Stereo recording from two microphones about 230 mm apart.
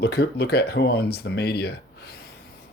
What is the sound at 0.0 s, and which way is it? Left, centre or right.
Speech, left.